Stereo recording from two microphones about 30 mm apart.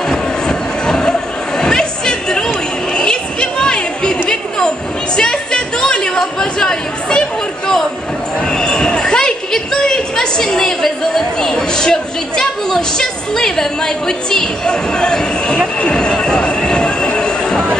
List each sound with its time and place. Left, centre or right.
0.1 s music: left
1.6 s chatter: left
8.5 s basketball bounce: left
9.0 s a sound: left
14.7 s speech: left
16.2 s train: left